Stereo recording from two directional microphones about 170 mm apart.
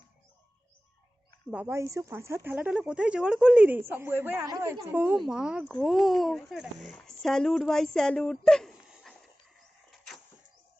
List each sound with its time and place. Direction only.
1.5 s a woman's voice: 10° right (ahead or behind)